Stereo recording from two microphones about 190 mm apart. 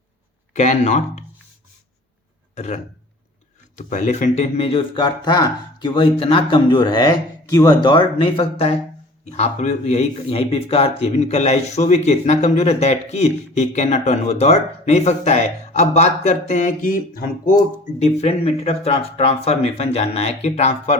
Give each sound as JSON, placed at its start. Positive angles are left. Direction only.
{"t": 0.5, "sound": "speech", "side_deg": 40}
{"t": 2.6, "sound": "speech", "side_deg": 35}
{"t": 18.0, "sound": "speech", "side_deg": 35}